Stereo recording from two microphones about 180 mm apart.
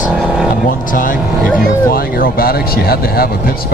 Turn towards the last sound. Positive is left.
turn(degrees=55)  # may be behind; listen again after turning